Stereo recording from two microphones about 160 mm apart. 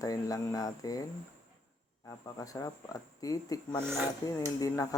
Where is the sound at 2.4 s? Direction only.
20° left (ahead or behind).